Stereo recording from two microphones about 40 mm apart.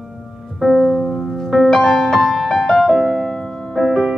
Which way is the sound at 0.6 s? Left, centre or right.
Centre.